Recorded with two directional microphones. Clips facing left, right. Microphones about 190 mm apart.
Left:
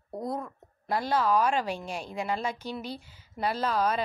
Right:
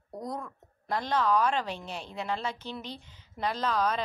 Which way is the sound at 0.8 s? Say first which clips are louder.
Left 2 dB; 10° left (ahead or behind).